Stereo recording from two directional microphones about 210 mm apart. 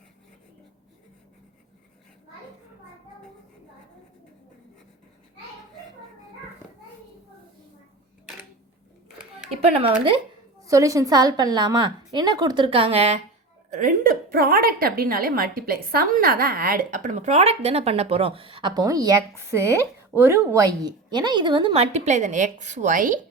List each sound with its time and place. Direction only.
10.6 s a woman's voice: 15° right (ahead or behind); by 23.2 s 40° right (ahead or behind)